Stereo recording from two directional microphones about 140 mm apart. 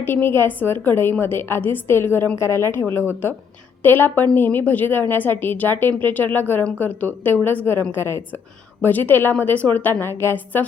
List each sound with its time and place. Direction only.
0.0 s a woman's voice: 15° left (ahead or behind)